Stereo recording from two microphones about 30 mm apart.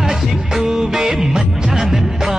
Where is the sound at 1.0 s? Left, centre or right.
Right.